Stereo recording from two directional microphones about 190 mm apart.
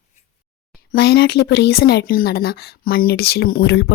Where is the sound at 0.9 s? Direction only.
60° left (ahead or behind).